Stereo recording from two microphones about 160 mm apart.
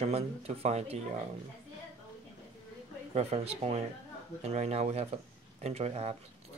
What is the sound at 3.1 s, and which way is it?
Speech, 40° right (ahead or behind).